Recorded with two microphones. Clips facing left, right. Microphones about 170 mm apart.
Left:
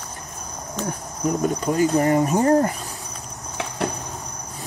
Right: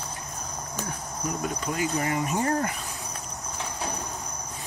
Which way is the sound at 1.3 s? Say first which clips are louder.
Left 9 dB; 40° left (ahead or behind).